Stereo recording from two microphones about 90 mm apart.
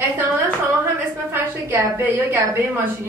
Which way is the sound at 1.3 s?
25° right (ahead or behind).